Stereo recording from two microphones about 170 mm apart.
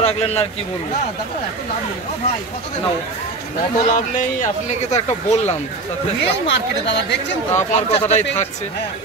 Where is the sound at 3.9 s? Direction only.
50° left (ahead or behind).